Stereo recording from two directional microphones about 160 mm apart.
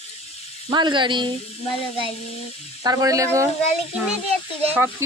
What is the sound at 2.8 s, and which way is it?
Speech, 20° right (ahead or behind).